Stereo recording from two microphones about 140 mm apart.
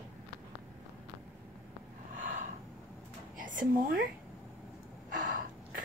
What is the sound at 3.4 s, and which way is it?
Speech, 80° right.